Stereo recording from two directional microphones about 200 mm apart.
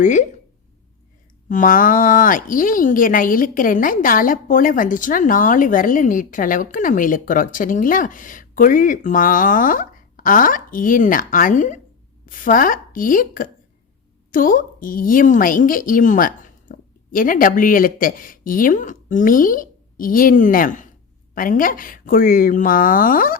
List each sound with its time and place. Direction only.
0.0 s speech: 40° left (ahead or behind)
1.5 s a woman's voice: 40° left (ahead or behind)